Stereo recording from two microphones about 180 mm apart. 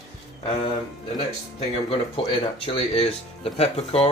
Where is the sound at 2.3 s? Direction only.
30° left (ahead or behind).